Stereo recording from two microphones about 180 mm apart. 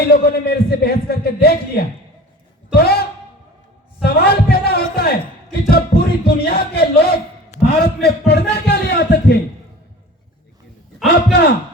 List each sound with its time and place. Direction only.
0.1 s a man's voice: 60° left (ahead or behind)
4.0 s a sound: 60° left (ahead or behind)
5.6 s music: 60° left (ahead or behind)
7.7 s a man's voice: 60° left (ahead or behind)
8.3 s music: 65° left (ahead or behind)
11.3 s speech: 65° left (ahead or behind)